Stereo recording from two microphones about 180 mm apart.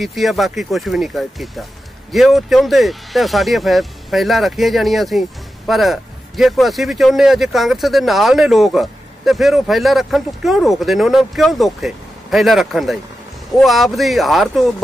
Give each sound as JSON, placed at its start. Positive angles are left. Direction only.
{"t": 0.0, "sound": "a man's voice", "side_deg": 0}